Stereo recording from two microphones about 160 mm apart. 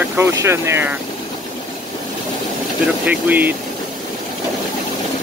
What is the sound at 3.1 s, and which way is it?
Speech, 10° right (ahead or behind).